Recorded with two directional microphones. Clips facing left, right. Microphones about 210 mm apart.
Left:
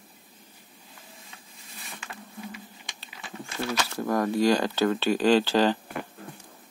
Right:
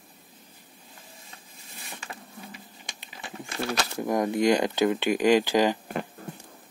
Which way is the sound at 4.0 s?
20° right (ahead or behind).